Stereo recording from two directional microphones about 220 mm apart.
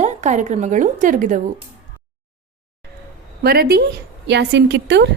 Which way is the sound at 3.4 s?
45° right (ahead or behind).